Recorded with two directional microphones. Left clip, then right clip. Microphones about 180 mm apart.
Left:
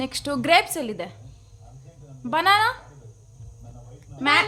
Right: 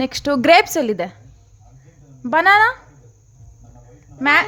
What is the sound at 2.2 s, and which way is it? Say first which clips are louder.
Speech: right 6 dB; 40° right (ahead or behind).